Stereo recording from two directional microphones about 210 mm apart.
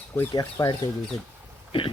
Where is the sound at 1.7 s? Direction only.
25° left (ahead or behind).